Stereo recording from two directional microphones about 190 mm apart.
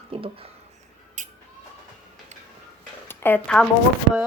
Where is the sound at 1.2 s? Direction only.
40° right (ahead or behind).